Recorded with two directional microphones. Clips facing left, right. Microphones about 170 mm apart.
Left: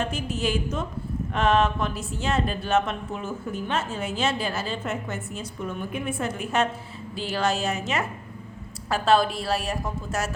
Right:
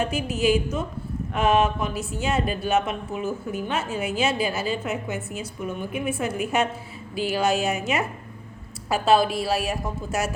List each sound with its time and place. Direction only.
0.0 s speech: 10° right (ahead or behind)